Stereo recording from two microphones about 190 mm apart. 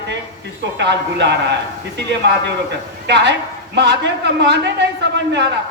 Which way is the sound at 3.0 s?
65° right (ahead or behind).